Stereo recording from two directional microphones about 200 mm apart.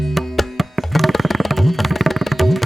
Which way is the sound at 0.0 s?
Centre (ahead or behind).